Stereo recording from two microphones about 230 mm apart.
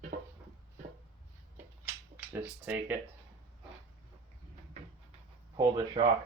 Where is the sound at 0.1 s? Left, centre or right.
Right.